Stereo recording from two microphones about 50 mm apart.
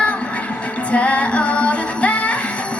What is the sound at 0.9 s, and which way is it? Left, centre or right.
Music, left.